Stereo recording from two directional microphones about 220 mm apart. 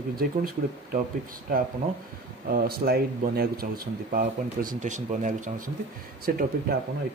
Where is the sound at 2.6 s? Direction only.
45° right (ahead or behind).